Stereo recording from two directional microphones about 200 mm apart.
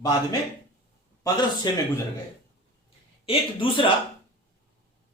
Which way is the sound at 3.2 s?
25° left (ahead or behind).